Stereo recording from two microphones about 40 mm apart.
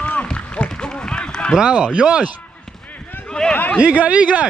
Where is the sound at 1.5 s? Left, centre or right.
Right.